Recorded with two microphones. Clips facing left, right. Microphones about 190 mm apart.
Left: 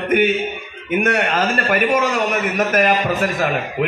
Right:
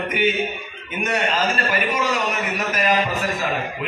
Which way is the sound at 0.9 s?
60° left (ahead or behind).